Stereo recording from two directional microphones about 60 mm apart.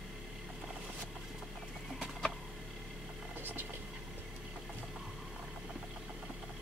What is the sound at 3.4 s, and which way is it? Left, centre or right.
Vehicle, right.